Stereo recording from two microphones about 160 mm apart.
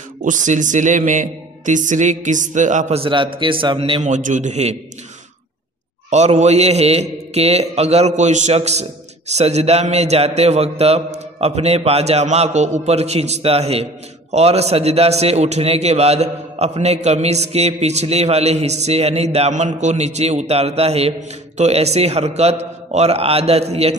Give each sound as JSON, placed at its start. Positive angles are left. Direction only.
{"t": 0.2, "sound": "a man's voice", "side_deg": -50}
{"t": 3.0, "sound": "a man's voice", "side_deg": -30}
{"t": 4.0, "sound": "a man's voice", "side_deg": -50}
{"t": 6.0, "sound": "a man's voice", "side_deg": -45}